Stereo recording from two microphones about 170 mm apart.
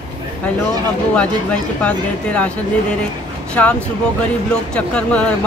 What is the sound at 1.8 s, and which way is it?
Speech, 10° left (ahead or behind).